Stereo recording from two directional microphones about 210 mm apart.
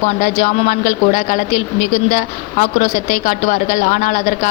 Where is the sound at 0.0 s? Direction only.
35° left (ahead or behind).